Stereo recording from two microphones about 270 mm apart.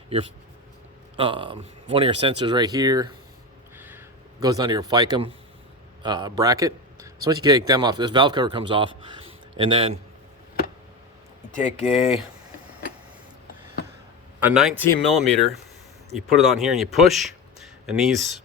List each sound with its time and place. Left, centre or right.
1.1 s speech: centre
3.8 s crow: centre
6.0 s a man's voice: centre
11.5 s speech: left
14.3 s speech: centre